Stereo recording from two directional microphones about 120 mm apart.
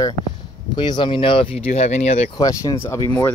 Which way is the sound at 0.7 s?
40° left (ahead or behind).